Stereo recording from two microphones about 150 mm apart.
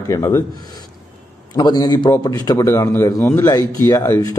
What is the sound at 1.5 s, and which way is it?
A man's voice, 25° left (ahead or behind).